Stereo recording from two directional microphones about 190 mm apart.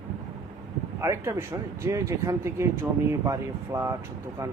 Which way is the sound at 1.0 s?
15° right (ahead or behind).